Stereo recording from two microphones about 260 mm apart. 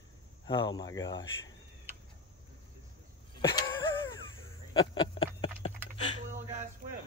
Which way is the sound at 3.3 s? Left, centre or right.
Centre.